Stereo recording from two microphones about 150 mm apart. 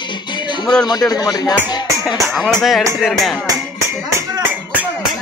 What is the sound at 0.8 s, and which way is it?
Speech, 25° left (ahead or behind).